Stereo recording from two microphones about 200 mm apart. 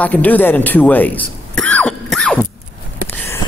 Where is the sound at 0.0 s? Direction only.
10° left (ahead or behind).